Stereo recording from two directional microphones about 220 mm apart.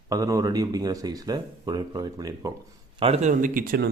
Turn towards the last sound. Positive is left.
turn(degrees=-40)  # may be behind; listen again after turning